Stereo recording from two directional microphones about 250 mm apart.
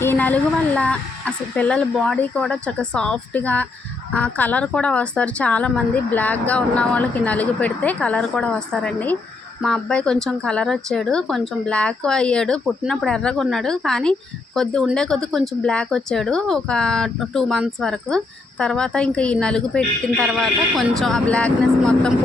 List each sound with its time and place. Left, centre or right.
0.0 s speech: centre